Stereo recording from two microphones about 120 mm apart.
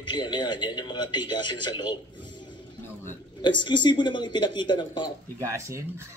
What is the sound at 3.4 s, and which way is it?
Speech, 40° left (ahead or behind).